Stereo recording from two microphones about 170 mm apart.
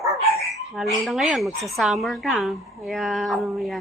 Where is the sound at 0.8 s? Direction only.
Centre (ahead or behind).